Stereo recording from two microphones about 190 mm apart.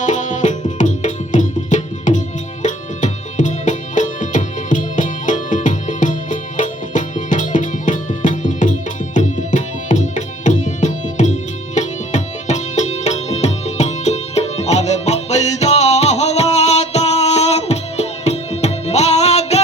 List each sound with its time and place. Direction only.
0.0 s music: 40° left (ahead or behind)